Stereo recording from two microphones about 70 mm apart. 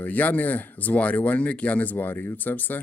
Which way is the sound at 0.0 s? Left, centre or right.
Left.